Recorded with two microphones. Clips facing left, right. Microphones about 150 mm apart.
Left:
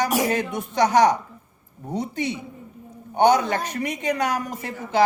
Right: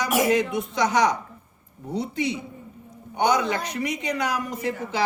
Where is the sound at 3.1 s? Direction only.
50° left (ahead or behind).